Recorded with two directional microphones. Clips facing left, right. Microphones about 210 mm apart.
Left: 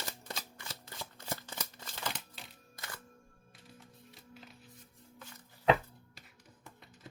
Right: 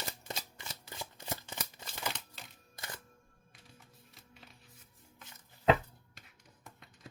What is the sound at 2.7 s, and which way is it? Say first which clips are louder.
Music: right 1 dB; 25° right (ahead or behind).